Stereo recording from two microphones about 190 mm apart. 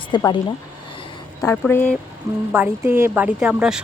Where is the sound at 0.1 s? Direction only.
20° left (ahead or behind).